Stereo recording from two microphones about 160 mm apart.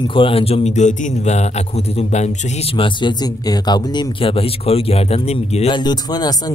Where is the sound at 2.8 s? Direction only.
25° left (ahead or behind).